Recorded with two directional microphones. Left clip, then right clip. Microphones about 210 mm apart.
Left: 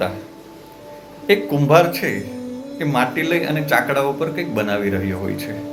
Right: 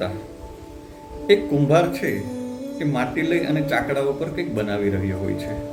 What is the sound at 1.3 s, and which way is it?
Speech, 40° left (ahead or behind).